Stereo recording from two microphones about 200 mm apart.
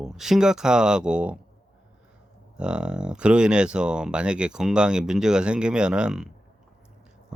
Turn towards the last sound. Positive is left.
turn(degrees=-5)  # may be behind; listen again after turning